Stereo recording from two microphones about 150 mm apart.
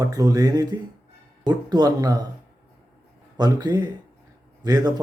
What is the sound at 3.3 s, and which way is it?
A man's voice, 25° right (ahead or behind).